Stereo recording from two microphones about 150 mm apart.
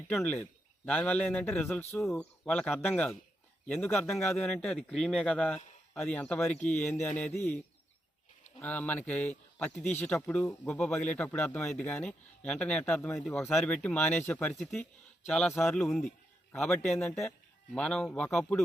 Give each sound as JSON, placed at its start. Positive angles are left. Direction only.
{"t": 0.1, "sound": "a man's voice", "side_deg": 10}
{"t": 2.1, "sound": "a man's voice", "side_deg": 10}
{"t": 8.6, "sound": "a man's voice", "side_deg": 10}
{"t": 10.7, "sound": "a man's voice", "side_deg": 5}
{"t": 14.6, "sound": "a man's voice", "side_deg": 0}